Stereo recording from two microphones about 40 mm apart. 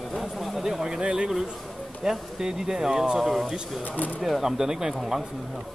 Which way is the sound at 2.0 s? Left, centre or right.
Centre.